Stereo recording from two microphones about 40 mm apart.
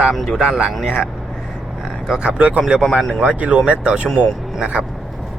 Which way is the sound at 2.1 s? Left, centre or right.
Right.